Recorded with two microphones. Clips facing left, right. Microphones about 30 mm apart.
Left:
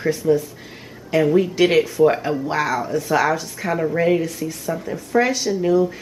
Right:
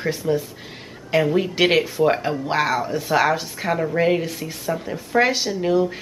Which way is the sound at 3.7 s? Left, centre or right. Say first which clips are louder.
Left 1 dB; centre.